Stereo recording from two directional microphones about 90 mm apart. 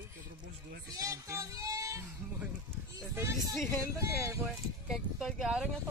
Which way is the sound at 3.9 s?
35° right (ahead or behind).